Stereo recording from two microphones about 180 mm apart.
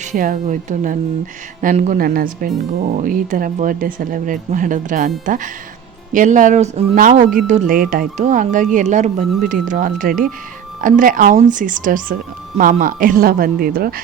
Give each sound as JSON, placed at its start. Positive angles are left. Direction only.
{"t": 0.0, "sound": "speech", "side_deg": -45}